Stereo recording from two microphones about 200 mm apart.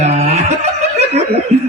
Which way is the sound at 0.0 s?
35° right (ahead or behind).